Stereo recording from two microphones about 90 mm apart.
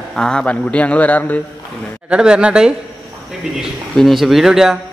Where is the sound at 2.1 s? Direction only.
10° right (ahead or behind).